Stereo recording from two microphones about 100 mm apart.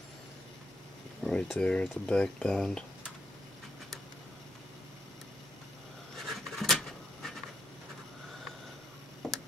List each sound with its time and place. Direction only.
1.2 s speech: 5° left (ahead or behind)
6.1 s a sound: centre (ahead or behind)
9.2 s tick-tock: centre (ahead or behind)